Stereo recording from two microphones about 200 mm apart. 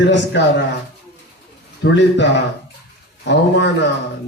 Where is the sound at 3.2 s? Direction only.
60° left (ahead or behind).